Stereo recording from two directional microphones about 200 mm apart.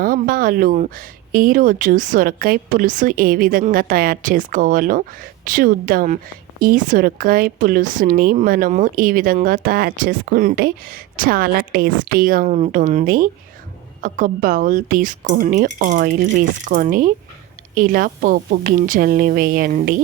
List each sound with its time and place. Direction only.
0.0 s speech: 45° right (ahead or behind)